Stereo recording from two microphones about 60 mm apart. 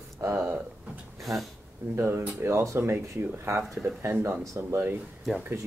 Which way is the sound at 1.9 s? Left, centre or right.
Right.